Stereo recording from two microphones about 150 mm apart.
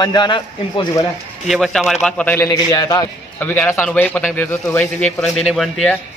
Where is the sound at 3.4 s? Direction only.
15° left (ahead or behind).